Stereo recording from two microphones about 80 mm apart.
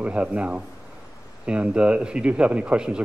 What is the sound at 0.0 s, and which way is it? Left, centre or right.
A man's voice, centre.